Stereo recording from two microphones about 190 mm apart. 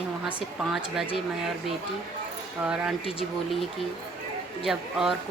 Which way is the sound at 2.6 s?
5° right (ahead or behind).